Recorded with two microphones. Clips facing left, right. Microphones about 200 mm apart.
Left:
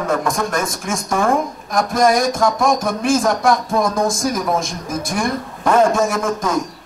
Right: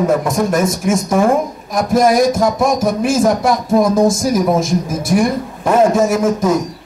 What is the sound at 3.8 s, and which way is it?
Speech, 25° right (ahead or behind).